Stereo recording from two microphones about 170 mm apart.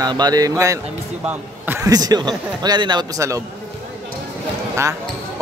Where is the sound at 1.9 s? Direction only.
20° right (ahead or behind).